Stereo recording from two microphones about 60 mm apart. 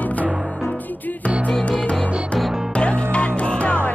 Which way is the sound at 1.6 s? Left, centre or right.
Centre.